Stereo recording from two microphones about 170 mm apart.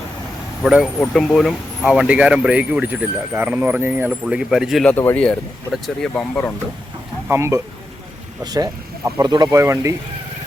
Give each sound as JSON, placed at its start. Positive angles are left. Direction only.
{"t": 0.6, "sound": "speech", "side_deg": 0}
{"t": 7.3, "sound": "speech", "side_deg": -15}